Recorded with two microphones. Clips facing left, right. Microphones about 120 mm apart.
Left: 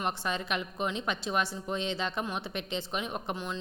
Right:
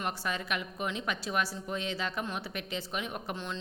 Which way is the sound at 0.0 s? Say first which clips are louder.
Left 2 dB; 25° left (ahead or behind).